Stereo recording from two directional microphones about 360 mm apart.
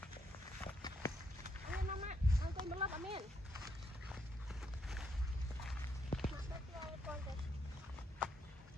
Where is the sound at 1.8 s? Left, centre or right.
Centre.